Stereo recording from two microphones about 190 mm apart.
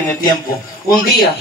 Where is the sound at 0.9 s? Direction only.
50° left (ahead or behind).